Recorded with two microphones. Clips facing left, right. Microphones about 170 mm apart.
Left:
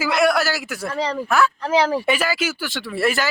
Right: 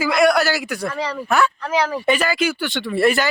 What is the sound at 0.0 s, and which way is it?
A man's voice, 5° left (ahead or behind).